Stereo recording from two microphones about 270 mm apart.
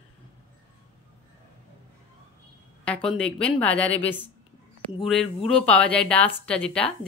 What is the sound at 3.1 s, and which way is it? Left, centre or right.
A woman's voice, centre.